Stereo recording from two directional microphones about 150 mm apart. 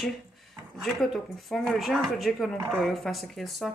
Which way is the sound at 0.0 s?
Centre (ahead or behind).